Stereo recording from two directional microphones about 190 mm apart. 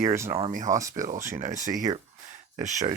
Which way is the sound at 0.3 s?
30° right (ahead or behind).